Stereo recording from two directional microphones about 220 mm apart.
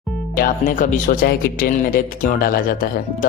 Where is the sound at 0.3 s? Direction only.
40° left (ahead or behind).